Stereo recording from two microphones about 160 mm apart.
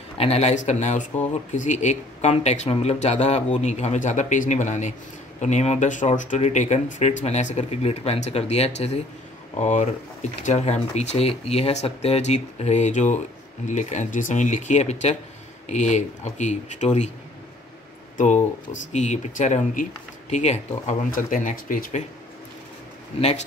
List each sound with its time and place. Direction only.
0.2 s speech: 40° left (ahead or behind)
18.1 s speech: 50° left (ahead or behind)
21.1 s speech: 55° left (ahead or behind)